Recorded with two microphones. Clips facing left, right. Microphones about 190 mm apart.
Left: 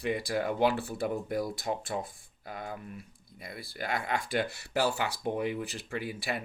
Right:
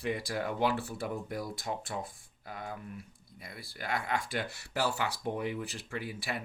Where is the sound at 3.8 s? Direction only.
20° left (ahead or behind).